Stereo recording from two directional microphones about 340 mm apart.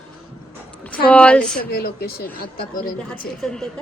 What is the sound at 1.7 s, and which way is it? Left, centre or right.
Speech, left.